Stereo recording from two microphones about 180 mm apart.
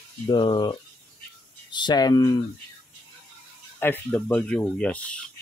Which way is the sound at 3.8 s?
10° left (ahead or behind).